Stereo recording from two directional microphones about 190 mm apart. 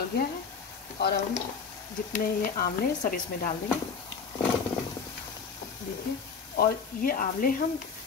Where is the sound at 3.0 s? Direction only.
45° left (ahead or behind).